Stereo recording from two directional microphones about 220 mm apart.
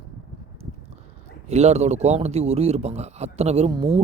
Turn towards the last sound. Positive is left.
turn(degrees=-25)  # may be behind; listen again after turning